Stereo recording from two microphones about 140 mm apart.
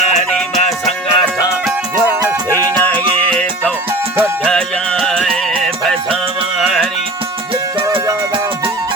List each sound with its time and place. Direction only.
0.0 s music: 55° left (ahead or behind)
0.3 s music: 5° left (ahead or behind)
0.6 s music: 50° left (ahead or behind)
2.2 s music: 25° right (ahead or behind)
3.0 s music: 35° right (ahead or behind)
4.4 s music: 5° left (ahead or behind)
6.6 s music: centre (ahead or behind)